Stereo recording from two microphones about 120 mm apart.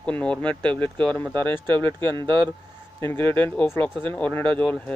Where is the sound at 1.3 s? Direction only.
40° right (ahead or behind).